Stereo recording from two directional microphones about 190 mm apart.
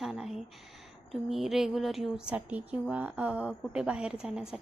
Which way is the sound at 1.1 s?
Centre (ahead or behind).